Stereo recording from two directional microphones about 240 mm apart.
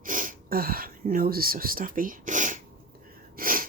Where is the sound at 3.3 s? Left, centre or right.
Right.